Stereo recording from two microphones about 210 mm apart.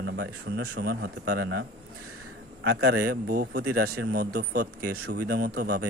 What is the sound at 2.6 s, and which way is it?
Speech, 50° right (ahead or behind).